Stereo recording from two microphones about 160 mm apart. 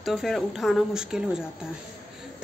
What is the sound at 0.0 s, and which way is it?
A woman's voice, centre (ahead or behind).